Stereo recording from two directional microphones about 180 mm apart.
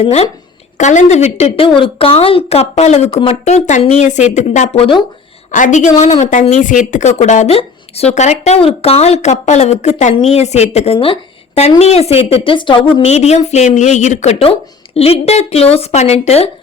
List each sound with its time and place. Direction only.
0.0 s speech: 35° left (ahead or behind)
5.5 s a woman's voice: 45° left (ahead or behind)